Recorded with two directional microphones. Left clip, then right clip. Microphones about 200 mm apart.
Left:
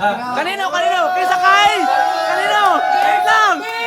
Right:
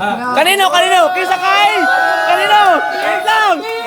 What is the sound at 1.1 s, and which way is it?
Speech, 5° right (ahead or behind).